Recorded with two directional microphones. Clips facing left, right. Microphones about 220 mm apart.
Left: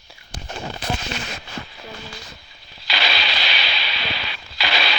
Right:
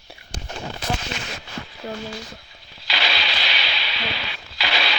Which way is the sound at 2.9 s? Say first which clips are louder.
Left 1 dB; 75° left (ahead or behind).